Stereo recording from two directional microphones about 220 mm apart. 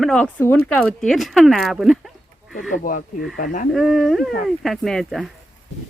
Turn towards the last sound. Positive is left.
turn(degrees=0)  # may be behind; listen again after turning